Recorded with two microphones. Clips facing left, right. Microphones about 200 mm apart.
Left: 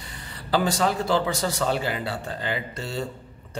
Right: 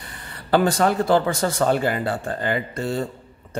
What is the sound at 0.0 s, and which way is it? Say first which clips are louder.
A man's voice: right 1 dB; 55° right (ahead or behind).